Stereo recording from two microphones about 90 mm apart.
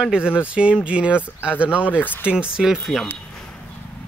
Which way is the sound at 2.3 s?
10° right (ahead or behind).